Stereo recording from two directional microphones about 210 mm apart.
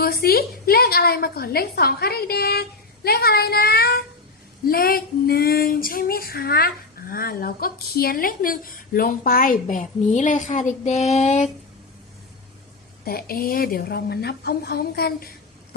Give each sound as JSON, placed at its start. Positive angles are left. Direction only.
{"t": 0.0, "sound": "speech", "side_deg": 45}
{"t": 13.1, "sound": "speech", "side_deg": 45}